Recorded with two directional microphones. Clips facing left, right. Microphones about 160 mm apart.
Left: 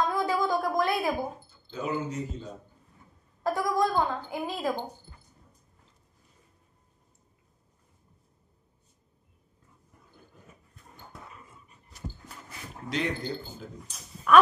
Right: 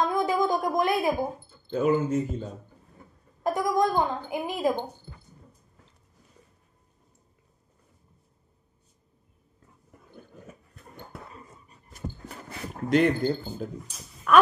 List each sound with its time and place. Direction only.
0.0 s a sound: 20° right (ahead or behind)
1.5 s speech: 55° right (ahead or behind)
3.4 s a woman's voice: 20° right (ahead or behind)
10.4 s dog: 70° right (ahead or behind)
11.3 s dog: 40° right (ahead or behind)
12.3 s a sound: 60° right (ahead or behind)
13.8 s speech: centre (ahead or behind)